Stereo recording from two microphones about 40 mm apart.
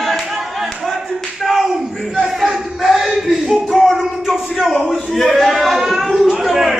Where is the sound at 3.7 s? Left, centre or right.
Centre.